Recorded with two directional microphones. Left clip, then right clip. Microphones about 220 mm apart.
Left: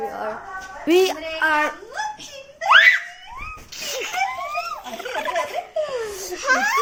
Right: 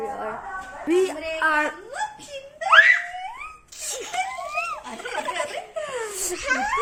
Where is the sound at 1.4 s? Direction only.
Centre (ahead or behind).